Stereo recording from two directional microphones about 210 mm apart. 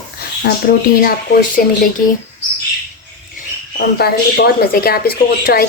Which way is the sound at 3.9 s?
50° left (ahead or behind).